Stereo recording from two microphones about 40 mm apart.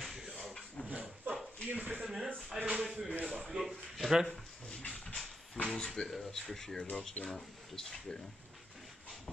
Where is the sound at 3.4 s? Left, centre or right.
Centre.